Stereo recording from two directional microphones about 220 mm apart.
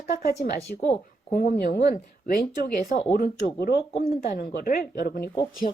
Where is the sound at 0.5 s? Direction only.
45° left (ahead or behind).